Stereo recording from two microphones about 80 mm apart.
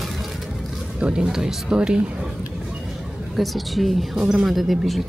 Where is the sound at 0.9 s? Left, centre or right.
Centre.